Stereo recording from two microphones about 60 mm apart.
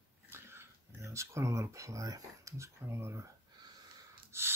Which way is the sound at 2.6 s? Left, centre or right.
Right.